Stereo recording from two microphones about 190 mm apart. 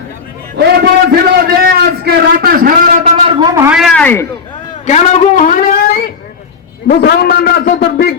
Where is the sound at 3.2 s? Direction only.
20° right (ahead or behind).